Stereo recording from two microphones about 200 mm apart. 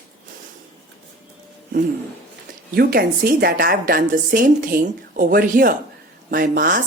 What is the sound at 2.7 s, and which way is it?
A woman's voice, 50° right (ahead or behind).